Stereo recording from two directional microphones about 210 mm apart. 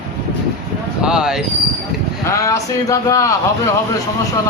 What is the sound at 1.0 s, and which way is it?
Speech, 5° right (ahead or behind).